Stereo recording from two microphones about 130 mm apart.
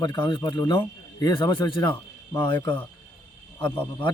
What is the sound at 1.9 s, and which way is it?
Speech, 20° left (ahead or behind).